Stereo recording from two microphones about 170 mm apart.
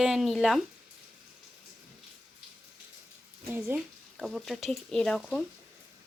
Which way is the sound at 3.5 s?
5° right (ahead or behind).